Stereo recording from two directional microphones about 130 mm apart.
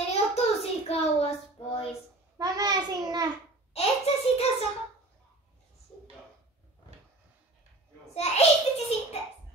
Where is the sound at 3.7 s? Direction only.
50° left (ahead or behind).